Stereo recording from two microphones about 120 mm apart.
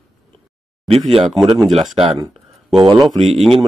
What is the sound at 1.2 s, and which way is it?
Speech, centre (ahead or behind).